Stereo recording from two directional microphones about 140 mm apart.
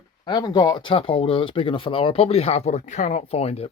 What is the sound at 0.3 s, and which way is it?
Speech, 30° left (ahead or behind).